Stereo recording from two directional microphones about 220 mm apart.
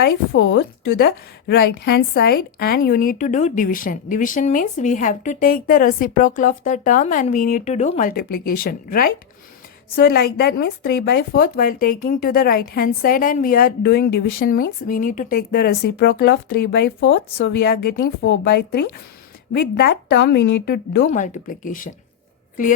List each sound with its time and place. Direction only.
0.0 s speech: 60° left (ahead or behind)
0.9 s a woman's voice: 45° left (ahead or behind)